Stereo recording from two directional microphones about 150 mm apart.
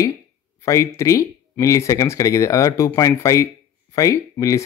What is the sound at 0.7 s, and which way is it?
A man's voice, 20° left (ahead or behind).